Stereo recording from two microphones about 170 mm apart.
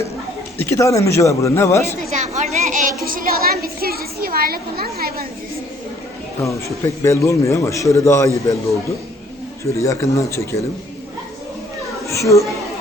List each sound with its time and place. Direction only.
0.6 s speech: 15° left (ahead or behind)
2.0 s a woman's voice: 40° right (ahead or behind); by 5.2 s 65° right (ahead or behind)
6.4 s speech: 20° left (ahead or behind)
9.6 s speech: 15° left (ahead or behind)
12.0 s a child's voice: 20° left (ahead or behind)